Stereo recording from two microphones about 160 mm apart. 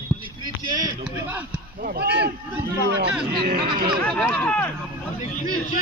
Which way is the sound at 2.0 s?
90° right.